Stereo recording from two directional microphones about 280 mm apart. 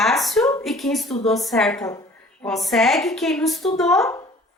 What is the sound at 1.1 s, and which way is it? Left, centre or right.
Speech, left.